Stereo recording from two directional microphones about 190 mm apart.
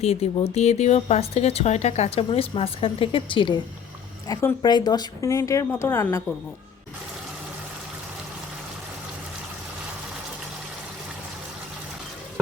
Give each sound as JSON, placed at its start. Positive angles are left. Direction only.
{"t": 0.0, "sound": "a woman's voice", "side_deg": 35}